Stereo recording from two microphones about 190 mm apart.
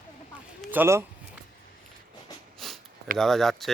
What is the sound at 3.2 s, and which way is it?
Speech, centre (ahead or behind).